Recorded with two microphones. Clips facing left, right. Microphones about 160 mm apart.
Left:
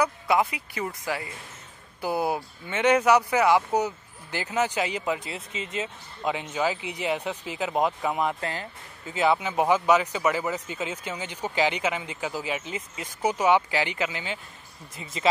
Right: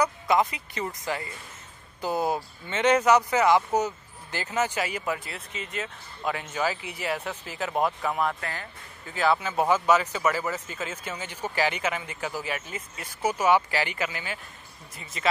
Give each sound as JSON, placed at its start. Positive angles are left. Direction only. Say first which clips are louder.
{"t": 0.0, "sound": "speech", "louder": "even", "side_deg": 10}